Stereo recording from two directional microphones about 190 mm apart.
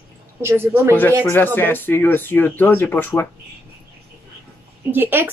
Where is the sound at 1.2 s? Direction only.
10° left (ahead or behind).